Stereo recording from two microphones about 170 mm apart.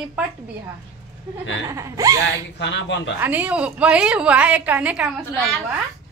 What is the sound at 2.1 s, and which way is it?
Speech, 90° left.